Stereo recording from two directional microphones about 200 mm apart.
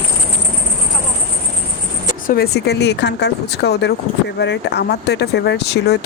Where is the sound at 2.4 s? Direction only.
55° left (ahead or behind).